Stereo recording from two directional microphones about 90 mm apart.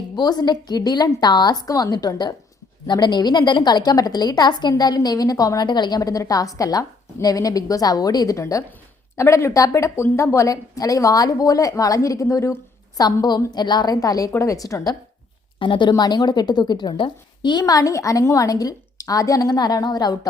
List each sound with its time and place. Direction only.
0.2 s a woman's voice: 50° left (ahead or behind)
6.0 s a woman's voice: 40° left (ahead or behind)
15.5 s a woman's voice: 65° left (ahead or behind); by 20.1 s 50° left (ahead or behind)